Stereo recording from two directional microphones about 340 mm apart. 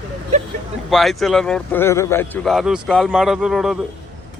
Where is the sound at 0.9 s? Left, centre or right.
Centre.